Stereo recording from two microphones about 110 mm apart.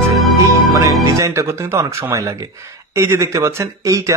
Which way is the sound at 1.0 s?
25° right (ahead or behind).